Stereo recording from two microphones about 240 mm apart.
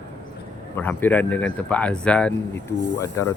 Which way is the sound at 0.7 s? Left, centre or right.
Centre.